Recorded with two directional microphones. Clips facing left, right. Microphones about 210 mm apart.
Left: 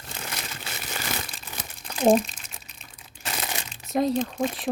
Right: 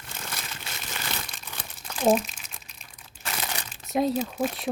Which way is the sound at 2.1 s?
5° right (ahead or behind).